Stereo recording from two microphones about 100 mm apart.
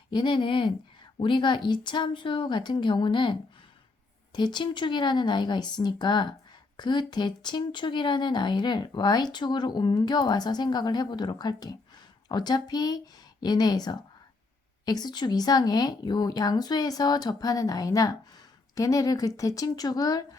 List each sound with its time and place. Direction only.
0.1 s speech: 50° left (ahead or behind)
4.4 s speech: 50° left (ahead or behind)